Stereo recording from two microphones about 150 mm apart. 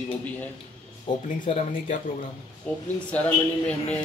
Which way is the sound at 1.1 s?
35° left (ahead or behind).